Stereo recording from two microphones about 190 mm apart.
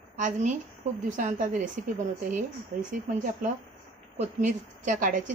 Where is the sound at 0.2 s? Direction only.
40° right (ahead or behind).